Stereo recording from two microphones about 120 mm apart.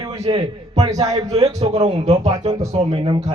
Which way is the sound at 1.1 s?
30° right (ahead or behind).